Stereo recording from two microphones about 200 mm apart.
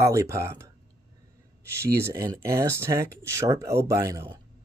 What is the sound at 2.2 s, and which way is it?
Speech, 15° right (ahead or behind).